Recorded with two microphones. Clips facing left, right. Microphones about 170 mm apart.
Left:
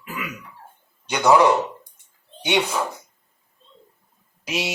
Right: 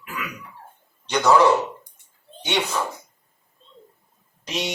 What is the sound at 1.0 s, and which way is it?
A man's voice, 10° left (ahead or behind).